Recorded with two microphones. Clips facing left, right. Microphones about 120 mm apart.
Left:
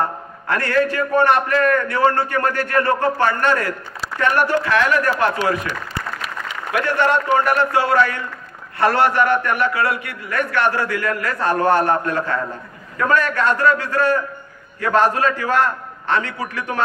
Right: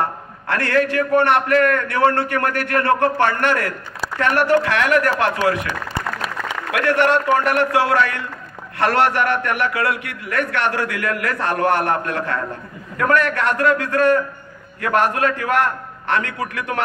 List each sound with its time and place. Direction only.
0.5 s a man's voice: 75° right (ahead or behind)